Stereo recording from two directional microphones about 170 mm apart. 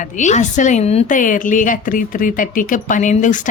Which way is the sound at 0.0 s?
45° left (ahead or behind).